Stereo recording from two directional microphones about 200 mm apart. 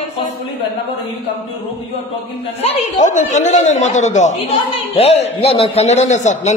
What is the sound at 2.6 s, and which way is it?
Speech, 35° left (ahead or behind).